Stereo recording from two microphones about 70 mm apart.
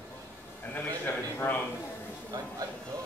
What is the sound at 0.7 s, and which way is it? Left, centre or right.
Speech, left.